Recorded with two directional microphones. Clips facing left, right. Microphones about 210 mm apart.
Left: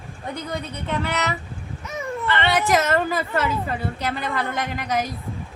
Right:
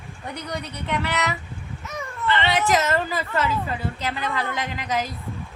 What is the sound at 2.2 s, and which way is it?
Speech, 55° left (ahead or behind).